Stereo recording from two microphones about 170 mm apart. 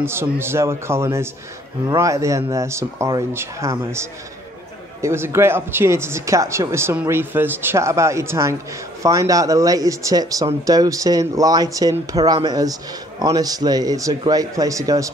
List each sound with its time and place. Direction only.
0.0 s speech: 15° right (ahead or behind)